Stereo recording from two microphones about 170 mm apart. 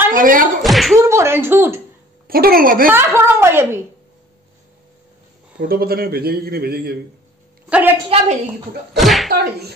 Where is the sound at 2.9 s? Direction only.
15° right (ahead or behind).